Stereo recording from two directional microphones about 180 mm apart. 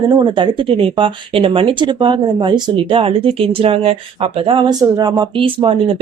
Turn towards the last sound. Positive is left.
turn(degrees=-30)  # may be behind; listen again after turning